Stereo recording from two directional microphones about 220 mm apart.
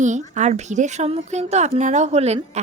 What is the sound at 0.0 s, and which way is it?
A woman's voice, 35° right (ahead or behind).